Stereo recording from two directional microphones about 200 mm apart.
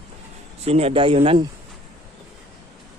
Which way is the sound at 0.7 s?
30° right (ahead or behind).